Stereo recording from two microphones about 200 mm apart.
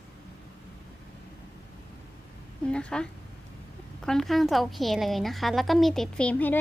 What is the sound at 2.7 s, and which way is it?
A woman's voice, 5° left (ahead or behind).